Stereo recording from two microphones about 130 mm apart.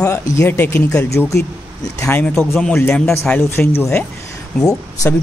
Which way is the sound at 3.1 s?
15° left (ahead or behind).